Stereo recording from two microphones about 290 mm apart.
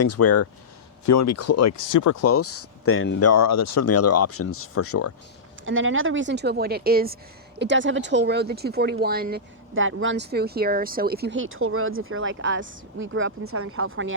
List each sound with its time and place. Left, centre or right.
0.0 s speech: left
1.0 s speech: left
5.6 s speech: right